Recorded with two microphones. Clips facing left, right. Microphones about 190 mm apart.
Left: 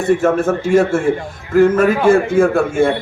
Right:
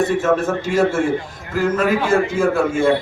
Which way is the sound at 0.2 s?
55° left (ahead or behind).